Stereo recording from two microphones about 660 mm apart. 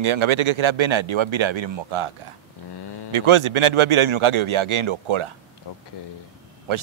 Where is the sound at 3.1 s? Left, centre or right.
Right.